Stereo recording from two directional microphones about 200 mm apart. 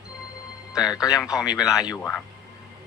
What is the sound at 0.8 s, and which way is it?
Speech, 20° left (ahead or behind).